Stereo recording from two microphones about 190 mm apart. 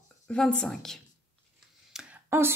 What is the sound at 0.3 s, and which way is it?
A woman's voice, 5° left (ahead or behind).